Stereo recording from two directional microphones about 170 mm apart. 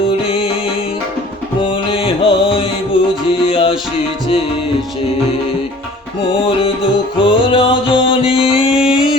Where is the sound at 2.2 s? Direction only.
30° left (ahead or behind).